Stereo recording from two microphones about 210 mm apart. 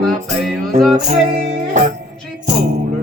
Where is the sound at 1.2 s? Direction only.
35° right (ahead or behind).